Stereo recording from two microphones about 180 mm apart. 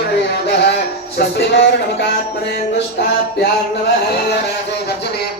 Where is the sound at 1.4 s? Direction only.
75° left (ahead or behind).